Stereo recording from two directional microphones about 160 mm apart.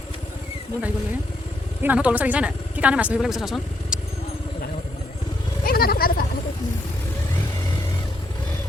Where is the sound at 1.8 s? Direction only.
10° right (ahead or behind).